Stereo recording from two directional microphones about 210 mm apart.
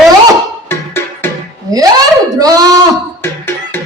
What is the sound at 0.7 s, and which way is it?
Music, 10° left (ahead or behind).